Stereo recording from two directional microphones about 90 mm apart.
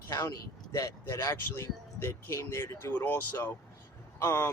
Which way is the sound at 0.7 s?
35° left (ahead or behind).